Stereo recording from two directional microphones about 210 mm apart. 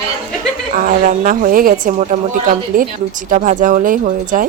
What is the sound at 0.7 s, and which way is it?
Speech, 40° right (ahead or behind).